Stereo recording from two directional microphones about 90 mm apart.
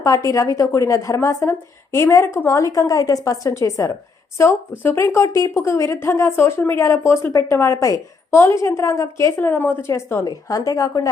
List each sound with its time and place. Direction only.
0.0 s speech: 40° left (ahead or behind)
4.8 s speech: 20° left (ahead or behind)
10.2 s speech: 40° left (ahead or behind)